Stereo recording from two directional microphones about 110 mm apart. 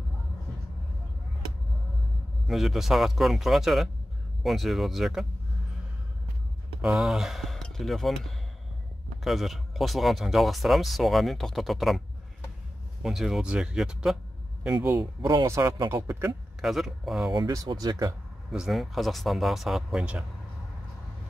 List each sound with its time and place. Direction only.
2.4 s speech: centre (ahead or behind)
6.8 s speech: 5° right (ahead or behind)
13.0 s speech: 5° right (ahead or behind)
14.9 s a man's voice: 30° right (ahead or behind)
16.6 s speech: 5° right (ahead or behind)
17.6 s speech: 35° right (ahead or behind)
18.5 s speech: 5° right (ahead or behind)